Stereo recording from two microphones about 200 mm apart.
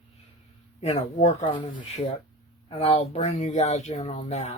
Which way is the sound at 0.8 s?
30° left (ahead or behind).